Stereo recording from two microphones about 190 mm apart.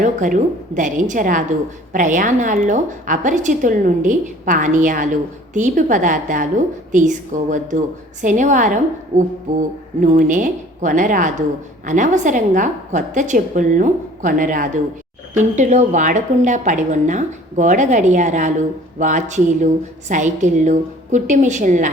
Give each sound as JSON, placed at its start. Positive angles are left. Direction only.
{"t": 0.0, "sound": "a woman's voice", "side_deg": -40}